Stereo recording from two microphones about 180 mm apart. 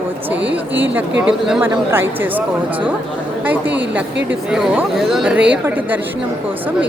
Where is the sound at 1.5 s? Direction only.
10° right (ahead or behind).